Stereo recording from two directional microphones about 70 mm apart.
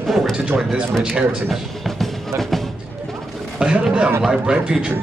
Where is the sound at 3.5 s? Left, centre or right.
Centre.